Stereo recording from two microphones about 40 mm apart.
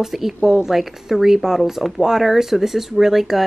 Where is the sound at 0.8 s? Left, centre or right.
Centre.